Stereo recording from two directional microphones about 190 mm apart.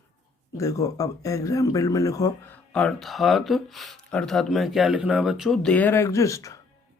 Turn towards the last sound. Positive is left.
turn(degrees=15)  # may be behind; listen again after turning